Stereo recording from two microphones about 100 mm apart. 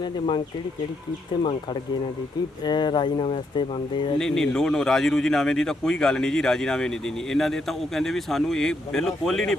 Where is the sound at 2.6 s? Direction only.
50° left (ahead or behind).